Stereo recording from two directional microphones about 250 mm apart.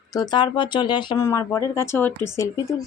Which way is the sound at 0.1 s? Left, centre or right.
Centre.